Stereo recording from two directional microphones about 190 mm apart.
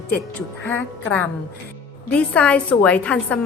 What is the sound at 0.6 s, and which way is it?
A woman's voice, 10° left (ahead or behind).